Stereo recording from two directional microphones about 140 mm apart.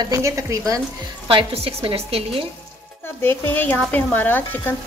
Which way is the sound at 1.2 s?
40° right (ahead or behind).